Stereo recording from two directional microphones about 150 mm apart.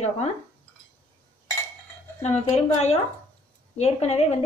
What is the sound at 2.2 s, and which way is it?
Speech, 45° left (ahead or behind).